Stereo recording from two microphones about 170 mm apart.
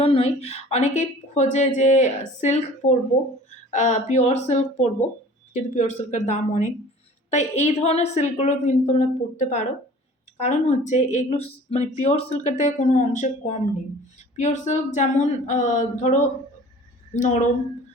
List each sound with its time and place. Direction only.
0.0 s a woman's voice: 35° left (ahead or behind)
3.7 s a woman's voice: 45° left (ahead or behind)